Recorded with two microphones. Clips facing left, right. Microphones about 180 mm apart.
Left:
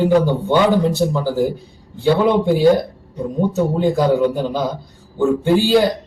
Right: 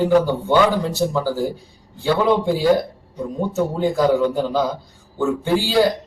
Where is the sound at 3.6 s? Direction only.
15° left (ahead or behind).